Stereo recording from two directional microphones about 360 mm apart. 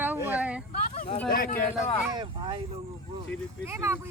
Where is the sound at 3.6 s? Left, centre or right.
Centre.